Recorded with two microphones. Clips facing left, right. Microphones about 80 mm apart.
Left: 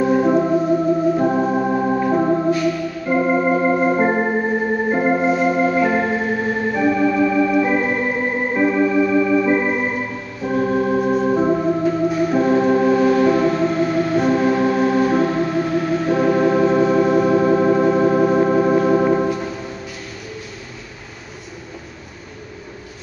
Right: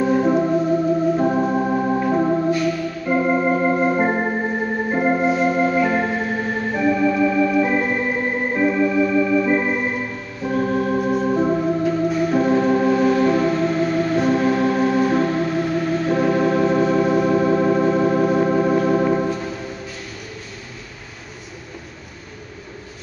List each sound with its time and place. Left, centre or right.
0.0 s organ: centre